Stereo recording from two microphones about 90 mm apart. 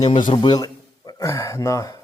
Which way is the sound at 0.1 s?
65° left (ahead or behind).